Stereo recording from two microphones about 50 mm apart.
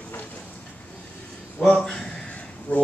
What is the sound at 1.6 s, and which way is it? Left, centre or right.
Speech, centre.